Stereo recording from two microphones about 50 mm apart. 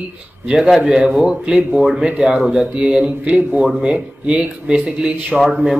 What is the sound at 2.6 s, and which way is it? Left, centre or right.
Speech, right.